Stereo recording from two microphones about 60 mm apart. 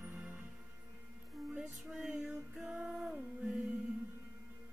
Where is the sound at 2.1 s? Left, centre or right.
Right.